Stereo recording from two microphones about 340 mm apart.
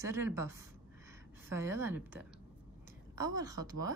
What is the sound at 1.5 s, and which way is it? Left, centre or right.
Speech, centre.